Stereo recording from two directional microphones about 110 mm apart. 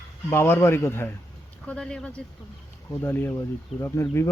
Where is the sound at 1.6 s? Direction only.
10° left (ahead or behind).